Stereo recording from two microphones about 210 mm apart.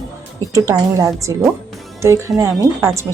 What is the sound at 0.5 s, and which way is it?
Speech, 15° right (ahead or behind).